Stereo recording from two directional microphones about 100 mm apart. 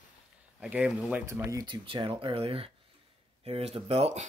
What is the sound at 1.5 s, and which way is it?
Speech, 50° right (ahead or behind).